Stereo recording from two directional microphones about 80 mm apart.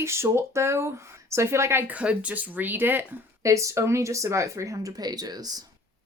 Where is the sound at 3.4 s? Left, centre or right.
Right.